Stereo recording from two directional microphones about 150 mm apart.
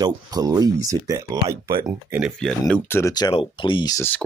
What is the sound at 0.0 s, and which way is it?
Speech, 25° right (ahead or behind).